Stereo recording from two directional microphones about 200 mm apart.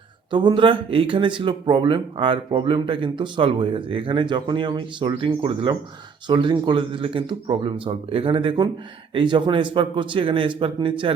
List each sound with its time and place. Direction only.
0.3 s speech: 25° right (ahead or behind)